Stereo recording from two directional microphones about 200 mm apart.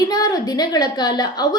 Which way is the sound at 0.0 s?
20° left (ahead or behind).